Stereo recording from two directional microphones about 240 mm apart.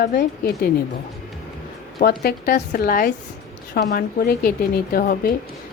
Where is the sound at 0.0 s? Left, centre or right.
Left.